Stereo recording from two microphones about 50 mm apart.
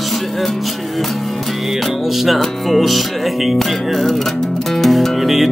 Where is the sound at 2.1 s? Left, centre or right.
Centre.